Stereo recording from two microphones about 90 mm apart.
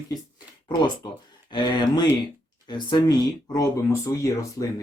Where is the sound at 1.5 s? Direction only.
55° left (ahead or behind).